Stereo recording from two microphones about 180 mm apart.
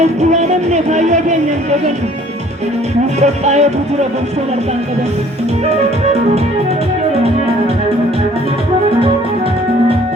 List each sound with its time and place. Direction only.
0.0 s music: 40° right (ahead or behind)
3.2 s music: 40° right (ahead or behind)